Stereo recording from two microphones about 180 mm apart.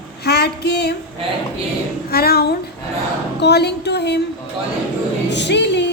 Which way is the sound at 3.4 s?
65° left (ahead or behind).